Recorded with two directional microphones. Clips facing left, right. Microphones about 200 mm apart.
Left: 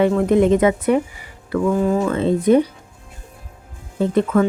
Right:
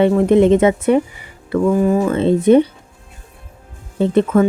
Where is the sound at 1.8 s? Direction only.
10° right (ahead or behind).